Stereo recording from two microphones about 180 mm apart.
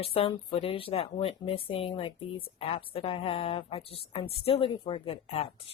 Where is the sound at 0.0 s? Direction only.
30° left (ahead or behind).